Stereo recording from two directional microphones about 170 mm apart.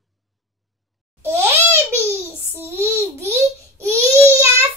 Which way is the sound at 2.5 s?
15° right (ahead or behind).